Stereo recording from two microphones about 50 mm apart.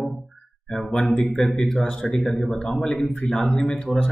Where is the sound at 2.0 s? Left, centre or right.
Left.